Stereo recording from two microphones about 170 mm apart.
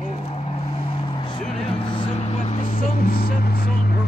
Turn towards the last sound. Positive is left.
turn(degrees=55)  # may be behind; listen again after turning